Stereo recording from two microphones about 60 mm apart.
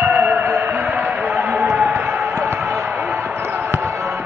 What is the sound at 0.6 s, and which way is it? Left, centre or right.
Music, right.